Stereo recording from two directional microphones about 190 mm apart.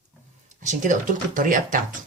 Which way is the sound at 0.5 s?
40° right (ahead or behind).